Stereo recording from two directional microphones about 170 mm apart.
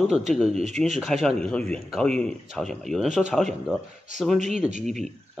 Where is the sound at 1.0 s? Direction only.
Centre (ahead or behind).